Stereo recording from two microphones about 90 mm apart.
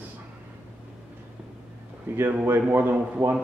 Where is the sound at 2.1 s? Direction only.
25° right (ahead or behind).